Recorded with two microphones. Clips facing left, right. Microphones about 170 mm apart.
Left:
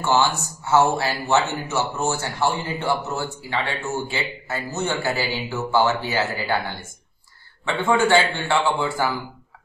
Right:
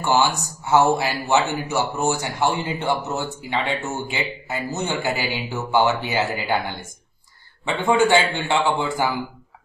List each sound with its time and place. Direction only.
0.0 s a man's voice: 15° right (ahead or behind)
7.6 s a man's voice: 15° right (ahead or behind)